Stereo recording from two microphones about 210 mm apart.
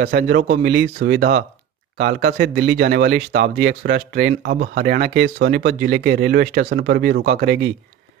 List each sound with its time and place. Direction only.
0.0 s speech: 45° right (ahead or behind)